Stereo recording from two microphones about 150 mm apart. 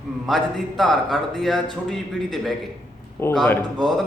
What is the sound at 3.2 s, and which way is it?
Speech, 15° left (ahead or behind).